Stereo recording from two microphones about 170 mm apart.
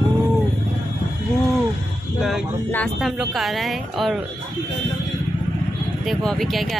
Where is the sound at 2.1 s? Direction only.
Centre (ahead or behind).